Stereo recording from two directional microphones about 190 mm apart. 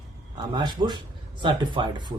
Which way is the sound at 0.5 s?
25° right (ahead or behind).